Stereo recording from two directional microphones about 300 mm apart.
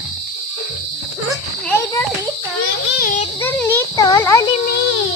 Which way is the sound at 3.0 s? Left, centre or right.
Left.